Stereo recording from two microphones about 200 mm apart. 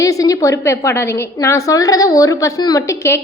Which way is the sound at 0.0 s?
15° left (ahead or behind).